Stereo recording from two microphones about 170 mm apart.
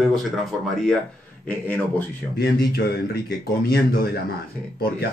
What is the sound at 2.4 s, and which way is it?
Speech, 65° left (ahead or behind).